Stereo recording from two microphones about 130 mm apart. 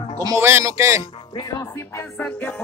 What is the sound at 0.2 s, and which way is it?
Speech, 25° right (ahead or behind).